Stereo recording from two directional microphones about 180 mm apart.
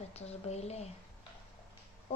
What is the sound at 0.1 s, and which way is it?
Speech, 35° left (ahead or behind).